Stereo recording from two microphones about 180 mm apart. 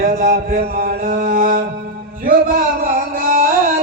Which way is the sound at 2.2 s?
55° right (ahead or behind).